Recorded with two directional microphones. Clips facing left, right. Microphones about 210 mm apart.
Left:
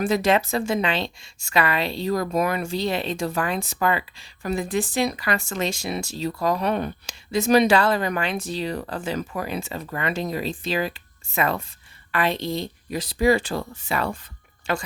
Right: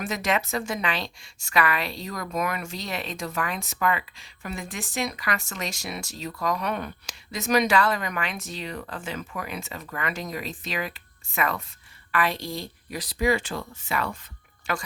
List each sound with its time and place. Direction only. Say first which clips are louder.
0.0 s a woman's voice: left 7 dB; 30° left (ahead or behind)